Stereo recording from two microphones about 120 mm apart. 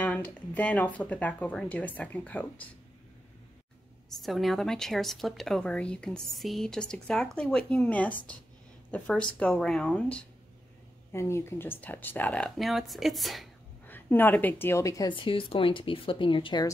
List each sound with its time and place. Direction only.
0.0 s speech: 10° left (ahead or behind)
4.2 s speech: centre (ahead or behind)
11.1 s speech: 25° left (ahead or behind); by 13.5 s centre (ahead or behind)
13.8 s a woman's voice: 15° left (ahead or behind)
15.0 s speech: 50° left (ahead or behind)